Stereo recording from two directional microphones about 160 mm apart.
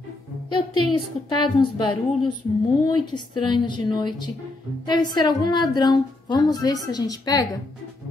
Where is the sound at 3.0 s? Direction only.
30° left (ahead or behind).